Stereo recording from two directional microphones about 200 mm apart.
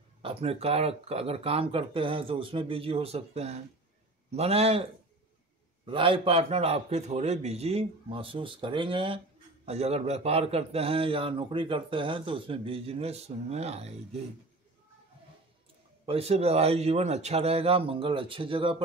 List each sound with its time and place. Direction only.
0.2 s a man's voice: 30° right (ahead or behind)
5.9 s a man's voice: 25° right (ahead or behind)
16.1 s a man's voice: 30° right (ahead or behind)